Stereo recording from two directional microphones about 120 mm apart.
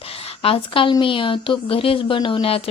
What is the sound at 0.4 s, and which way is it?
Speech, 50° left (ahead or behind).